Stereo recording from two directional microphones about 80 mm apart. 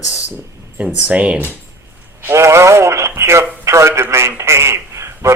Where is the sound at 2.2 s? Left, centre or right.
Right.